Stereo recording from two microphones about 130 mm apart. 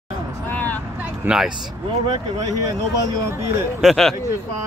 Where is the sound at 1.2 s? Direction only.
5° right (ahead or behind).